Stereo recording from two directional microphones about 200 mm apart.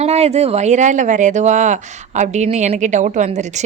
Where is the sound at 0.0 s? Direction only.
30° right (ahead or behind).